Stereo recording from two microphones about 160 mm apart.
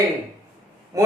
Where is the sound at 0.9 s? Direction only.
20° right (ahead or behind).